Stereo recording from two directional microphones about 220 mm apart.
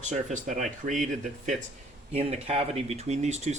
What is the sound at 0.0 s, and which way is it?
Speech, 35° right (ahead or behind).